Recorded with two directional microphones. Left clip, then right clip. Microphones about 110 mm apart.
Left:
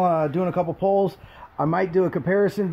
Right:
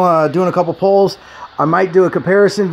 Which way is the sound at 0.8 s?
10° right (ahead or behind).